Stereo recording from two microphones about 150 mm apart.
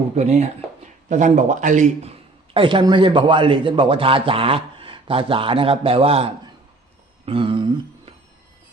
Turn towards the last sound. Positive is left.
turn(degrees=-35)  # may be behind; listen again after turning